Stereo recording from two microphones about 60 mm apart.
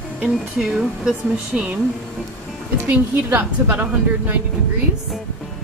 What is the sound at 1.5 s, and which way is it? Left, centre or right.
Speech, centre.